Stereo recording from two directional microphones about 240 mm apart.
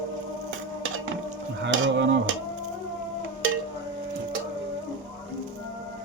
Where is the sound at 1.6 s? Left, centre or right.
Right.